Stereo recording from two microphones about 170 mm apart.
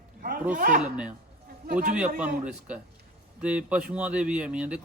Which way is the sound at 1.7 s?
55° right (ahead or behind).